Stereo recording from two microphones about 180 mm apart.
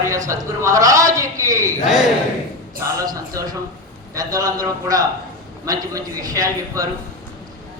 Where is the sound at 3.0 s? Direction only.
20° right (ahead or behind).